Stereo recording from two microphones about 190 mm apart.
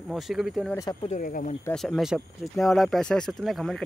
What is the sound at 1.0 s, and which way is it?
Speech, 45° left (ahead or behind).